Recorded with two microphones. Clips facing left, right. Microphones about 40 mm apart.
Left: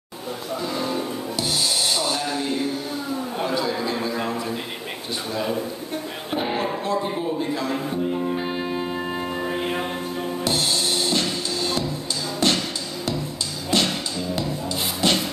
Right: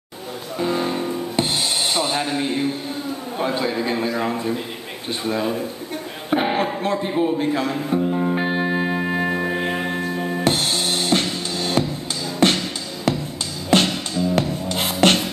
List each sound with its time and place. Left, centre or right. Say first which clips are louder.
0.6 s music: right 5 dB; right
3.4 s a man's voice: right 3 dB; right
6.3 s a man's voice: right 5 dB; right
8.3 s music: right 5 dB; right
8.9 s music: right 5 dB; right
13.7 s music: right 5 dB; right
14.3 s music: right 4 dB; right